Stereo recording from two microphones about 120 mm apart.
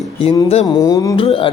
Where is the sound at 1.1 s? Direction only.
45° left (ahead or behind).